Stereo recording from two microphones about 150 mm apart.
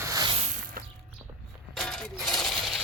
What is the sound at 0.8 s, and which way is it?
Mechanisms, 75° right (ahead or behind).